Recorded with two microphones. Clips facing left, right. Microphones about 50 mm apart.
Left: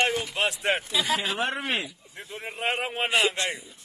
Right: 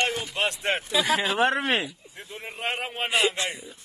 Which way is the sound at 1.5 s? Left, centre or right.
Right.